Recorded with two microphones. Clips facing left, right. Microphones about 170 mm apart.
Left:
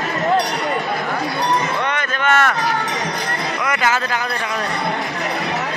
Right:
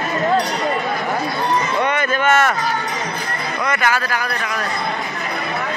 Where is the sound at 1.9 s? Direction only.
5° right (ahead or behind).